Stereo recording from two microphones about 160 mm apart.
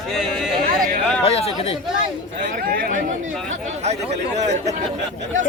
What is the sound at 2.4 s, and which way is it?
Speech, 65° right (ahead or behind).